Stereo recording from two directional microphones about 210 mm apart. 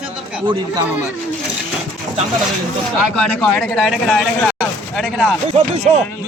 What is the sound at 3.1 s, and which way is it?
Speech, centre (ahead or behind).